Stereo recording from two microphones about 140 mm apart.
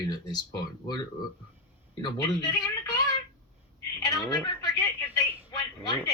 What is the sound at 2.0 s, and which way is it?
Speech, 30° left (ahead or behind).